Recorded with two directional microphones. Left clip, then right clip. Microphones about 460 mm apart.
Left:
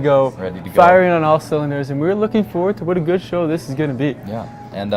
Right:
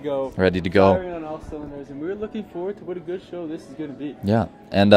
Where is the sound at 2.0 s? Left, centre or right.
Centre.